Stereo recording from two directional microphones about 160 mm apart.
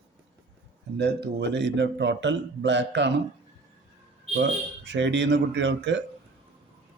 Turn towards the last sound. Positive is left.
turn(degrees=-90)